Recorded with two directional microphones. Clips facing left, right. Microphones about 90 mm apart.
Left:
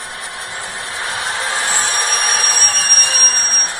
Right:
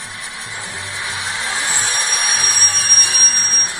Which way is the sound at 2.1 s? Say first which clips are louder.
Left 3 dB; 45° left (ahead or behind).